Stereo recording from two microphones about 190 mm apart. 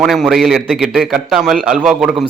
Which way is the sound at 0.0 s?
Centre (ahead or behind).